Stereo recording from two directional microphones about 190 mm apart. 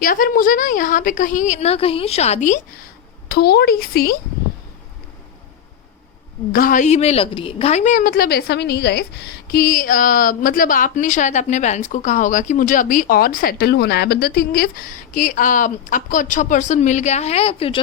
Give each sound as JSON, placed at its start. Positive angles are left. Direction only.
{"t": 0.0, "sound": "a woman's voice", "side_deg": 45}
{"t": 3.2, "sound": "speech", "side_deg": 55}
{"t": 6.5, "sound": "a woman's voice", "side_deg": 45}